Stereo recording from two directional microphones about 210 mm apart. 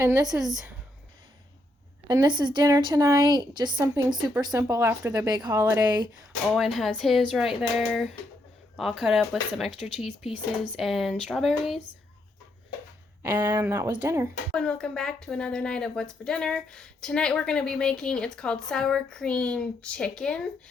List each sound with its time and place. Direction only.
0.0 s a woman's voice: 15° right (ahead or behind)
2.0 s a woman's voice: 20° right (ahead or behind)
6.5 s speech: centre (ahead or behind)
13.2 s a woman's voice: 10° right (ahead or behind)
14.5 s speech: 5° left (ahead or behind)